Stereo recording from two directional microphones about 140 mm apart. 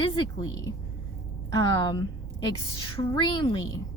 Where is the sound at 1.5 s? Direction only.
30° left (ahead or behind).